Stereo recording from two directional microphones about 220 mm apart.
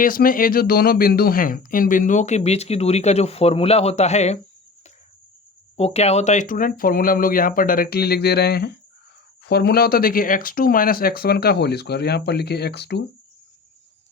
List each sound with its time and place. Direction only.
0.0 s speech: 40° left (ahead or behind)
5.7 s speech: 30° left (ahead or behind); by 13.1 s 50° left (ahead or behind)